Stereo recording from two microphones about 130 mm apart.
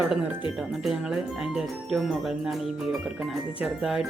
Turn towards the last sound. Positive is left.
turn(degrees=-5)  # may be behind; listen again after turning